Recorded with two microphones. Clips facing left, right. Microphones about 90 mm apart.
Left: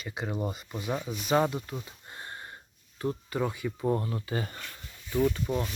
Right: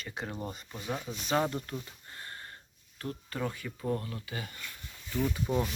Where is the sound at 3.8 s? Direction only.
25° left (ahead or behind).